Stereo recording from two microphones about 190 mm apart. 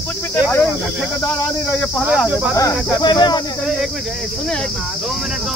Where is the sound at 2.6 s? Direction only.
20° left (ahead or behind).